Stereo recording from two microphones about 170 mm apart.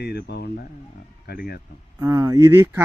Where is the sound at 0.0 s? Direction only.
70° left (ahead or behind).